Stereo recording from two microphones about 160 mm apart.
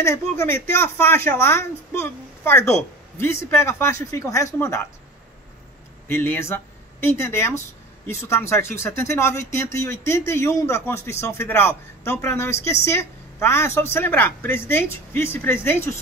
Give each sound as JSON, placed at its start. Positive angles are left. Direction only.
{"t": 0.0, "sound": "a woman's voice", "side_deg": 15}
{"t": 6.0, "sound": "a woman's voice", "side_deg": 15}